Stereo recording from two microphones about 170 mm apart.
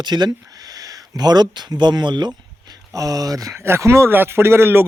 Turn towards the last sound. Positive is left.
turn(degrees=-15)  # may be behind; listen again after turning